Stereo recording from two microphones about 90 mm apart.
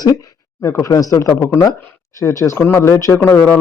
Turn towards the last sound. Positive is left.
turn(degrees=25)  # may be behind; listen again after turning